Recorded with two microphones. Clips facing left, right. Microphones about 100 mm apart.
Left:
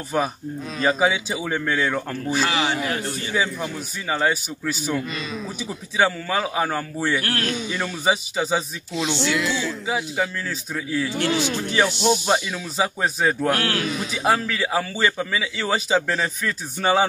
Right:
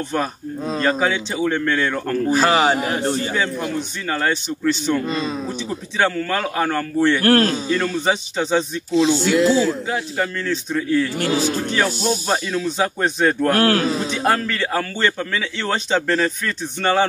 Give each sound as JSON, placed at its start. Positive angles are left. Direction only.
{"t": 0.8, "sound": "a man's voice", "side_deg": 10}
{"t": 2.2, "sound": "a man's voice", "side_deg": -45}
{"t": 3.3, "sound": "a man's voice", "side_deg": 5}
{"t": 5.0, "sound": "a man's voice", "side_deg": -35}
{"t": 5.9, "sound": "a man's voice", "side_deg": 5}
{"t": 7.2, "sound": "a man's voice", "side_deg": -40}
{"t": 7.7, "sound": "a man's voice", "side_deg": 5}
{"t": 8.9, "sound": "a man's voice", "side_deg": -35}
{"t": 9.8, "sound": "a man's voice", "side_deg": 5}
{"t": 11.1, "sound": "a man's voice", "side_deg": -40}
{"t": 12.3, "sound": "a man's voice", "side_deg": 5}
{"t": 13.5, "sound": "a man's voice", "side_deg": -40}
{"t": 14.1, "sound": "a man's voice", "side_deg": 5}